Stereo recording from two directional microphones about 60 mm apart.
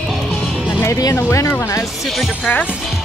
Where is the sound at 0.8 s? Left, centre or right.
Left.